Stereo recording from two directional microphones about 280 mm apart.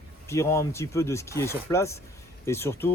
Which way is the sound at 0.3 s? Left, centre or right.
Centre.